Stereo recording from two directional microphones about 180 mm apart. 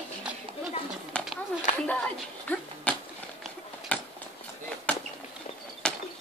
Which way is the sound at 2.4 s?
10° left (ahead or behind).